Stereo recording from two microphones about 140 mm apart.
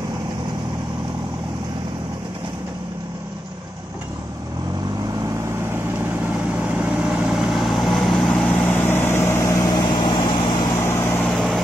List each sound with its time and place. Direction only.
6.6 s vehicle: 10° right (ahead or behind); by 10.4 s 35° left (ahead or behind)
10.9 s vehicle: 15° left (ahead or behind)
11.2 s vehicle: centre (ahead or behind)